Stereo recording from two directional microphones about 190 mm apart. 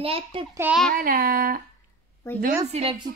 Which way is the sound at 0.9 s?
50° right (ahead or behind).